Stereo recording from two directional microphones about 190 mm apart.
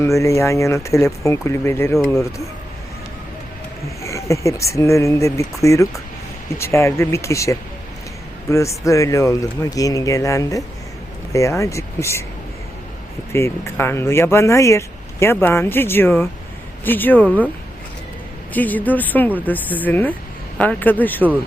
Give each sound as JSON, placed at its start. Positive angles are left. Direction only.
{"t": 0.0, "sound": "speech", "side_deg": 15}
{"t": 4.0, "sound": "speech", "side_deg": 15}
{"t": 13.3, "sound": "speech", "side_deg": 15}
{"t": 18.5, "sound": "speech", "side_deg": 10}